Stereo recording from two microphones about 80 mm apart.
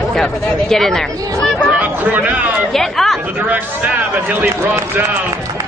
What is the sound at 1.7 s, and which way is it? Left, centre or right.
Speech, right.